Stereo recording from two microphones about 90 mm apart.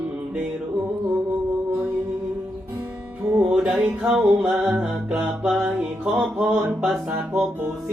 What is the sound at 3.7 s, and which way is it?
Music, 25° right (ahead or behind).